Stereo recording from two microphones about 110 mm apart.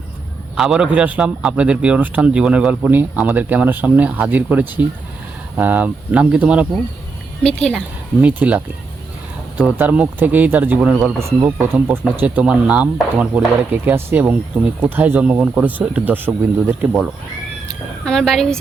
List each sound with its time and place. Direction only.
0.5 s speech: 5° right (ahead or behind)
7.4 s a woman's voice: 5° left (ahead or behind)
8.2 s speech: 15° right (ahead or behind)
17.7 s a woman's voice: 5° left (ahead or behind)